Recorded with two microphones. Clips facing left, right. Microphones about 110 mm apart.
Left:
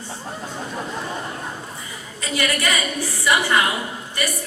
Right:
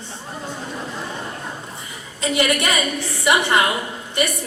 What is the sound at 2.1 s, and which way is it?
A woman's voice, 20° right (ahead or behind).